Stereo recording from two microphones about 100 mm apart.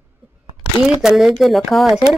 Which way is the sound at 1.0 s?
5° right (ahead or behind).